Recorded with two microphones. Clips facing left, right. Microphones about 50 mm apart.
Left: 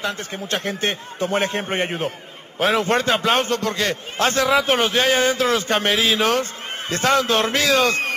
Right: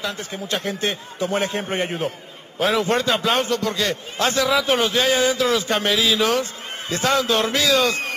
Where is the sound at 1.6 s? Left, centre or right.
Left.